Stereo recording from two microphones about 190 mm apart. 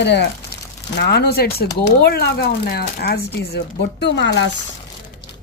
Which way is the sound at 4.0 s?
70° left (ahead or behind).